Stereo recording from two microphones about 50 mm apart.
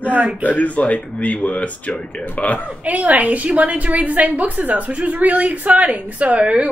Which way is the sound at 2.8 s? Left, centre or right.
Right.